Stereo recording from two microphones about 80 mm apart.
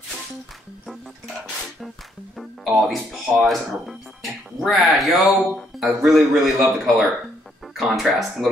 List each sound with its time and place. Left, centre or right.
2.3 s speech: centre